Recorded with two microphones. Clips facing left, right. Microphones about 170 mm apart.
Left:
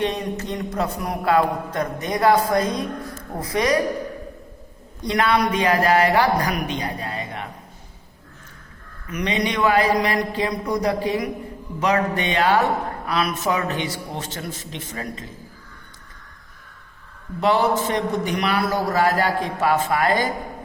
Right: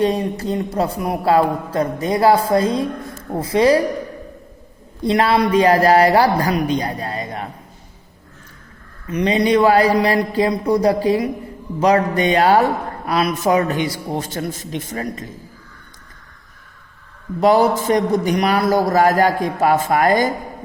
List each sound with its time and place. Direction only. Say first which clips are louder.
0.0 s a man's voice: right 6 dB; 35° right (ahead or behind)
5.0 s a man's voice: right 4 dB; 30° right (ahead or behind)
9.0 s a man's voice: right 7 dB; 30° right (ahead or behind)
17.4 s a man's voice: right 5 dB; 40° right (ahead or behind)